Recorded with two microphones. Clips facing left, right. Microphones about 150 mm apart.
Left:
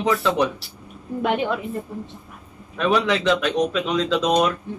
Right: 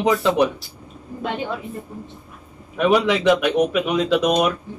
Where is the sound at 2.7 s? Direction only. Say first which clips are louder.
Right 3 dB; 15° right (ahead or behind).